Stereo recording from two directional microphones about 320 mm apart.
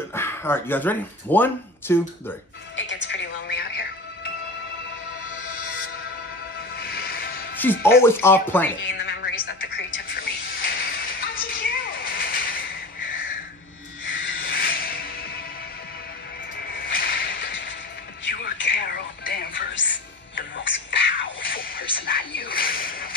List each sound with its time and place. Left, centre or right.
0.1 s speech: centre
2.7 s music: left
5.6 s music: left
6.8 s vehicle: left
7.6 s speech: centre
8.8 s music: left
14.0 s a sound: left
16.9 s whip: left
18.3 s music: left
22.0 s a sound: left